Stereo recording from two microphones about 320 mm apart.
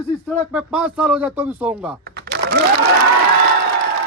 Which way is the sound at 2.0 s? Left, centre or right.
Right.